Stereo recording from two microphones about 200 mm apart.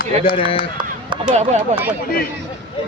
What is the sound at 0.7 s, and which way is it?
Chop, 25° right (ahead or behind).